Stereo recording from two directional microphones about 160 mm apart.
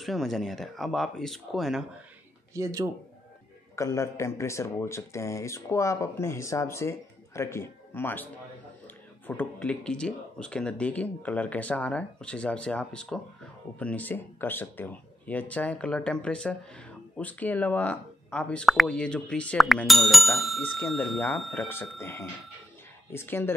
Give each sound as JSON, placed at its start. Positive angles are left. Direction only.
{"t": 0.0, "sound": "speech", "side_deg": 0}
{"t": 2.5, "sound": "speech", "side_deg": -20}
{"t": 3.7, "sound": "speech", "side_deg": 20}
{"t": 21.6, "sound": "speech", "side_deg": 15}